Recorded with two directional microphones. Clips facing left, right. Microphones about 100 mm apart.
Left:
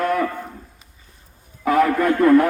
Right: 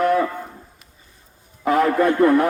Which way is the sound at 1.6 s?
25° right (ahead or behind).